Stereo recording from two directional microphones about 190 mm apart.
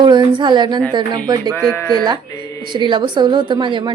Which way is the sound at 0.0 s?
25° right (ahead or behind).